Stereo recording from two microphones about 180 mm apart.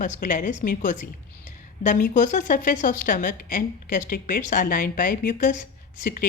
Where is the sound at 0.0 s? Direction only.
45° left (ahead or behind).